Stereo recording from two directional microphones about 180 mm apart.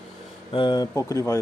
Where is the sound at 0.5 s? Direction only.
25° left (ahead or behind).